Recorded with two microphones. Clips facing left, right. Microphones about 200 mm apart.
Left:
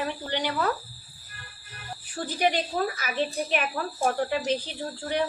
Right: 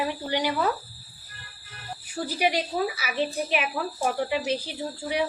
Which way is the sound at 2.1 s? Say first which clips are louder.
Even; 10° right (ahead or behind).